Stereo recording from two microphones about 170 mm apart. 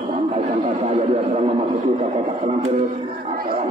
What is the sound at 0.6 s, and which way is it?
Music, 35° right (ahead or behind).